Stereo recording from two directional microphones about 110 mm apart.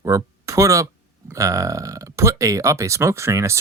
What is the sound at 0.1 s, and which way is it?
Speech, 30° right (ahead or behind).